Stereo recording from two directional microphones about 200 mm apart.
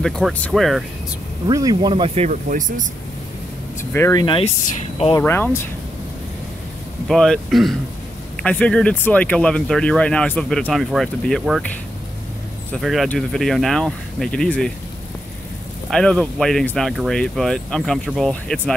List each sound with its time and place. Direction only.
0.0 s speech: 5° left (ahead or behind)
1.5 s speech: 20° right (ahead or behind); by 2.9 s 35° right (ahead or behind)
3.9 s speech: 15° left (ahead or behind)
4.6 s speech: 35° left (ahead or behind)
5.1 s speech: 10° left (ahead or behind)
7.1 s speech: centre (ahead or behind)
12.7 s speech: centre (ahead or behind)
15.9 s speech: 5° left (ahead or behind)